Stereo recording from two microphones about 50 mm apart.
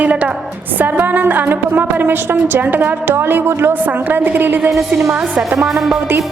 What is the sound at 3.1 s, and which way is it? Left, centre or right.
Speech, right.